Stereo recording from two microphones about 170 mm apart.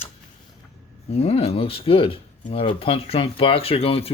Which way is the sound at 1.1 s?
35° left (ahead or behind).